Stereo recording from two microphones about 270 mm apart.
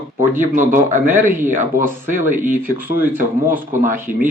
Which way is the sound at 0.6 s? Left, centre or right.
Right.